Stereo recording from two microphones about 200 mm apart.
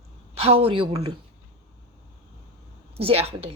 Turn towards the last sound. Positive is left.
turn(degrees=-30)  # may be behind; listen again after turning